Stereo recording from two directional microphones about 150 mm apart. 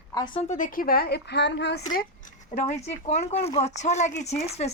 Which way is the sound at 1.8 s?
60° left (ahead or behind).